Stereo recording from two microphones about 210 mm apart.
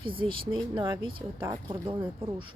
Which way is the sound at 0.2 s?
25° right (ahead or behind).